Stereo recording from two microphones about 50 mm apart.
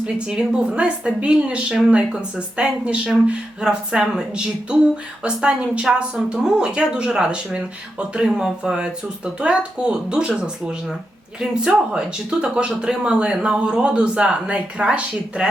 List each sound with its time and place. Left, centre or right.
0.0 s speech: centre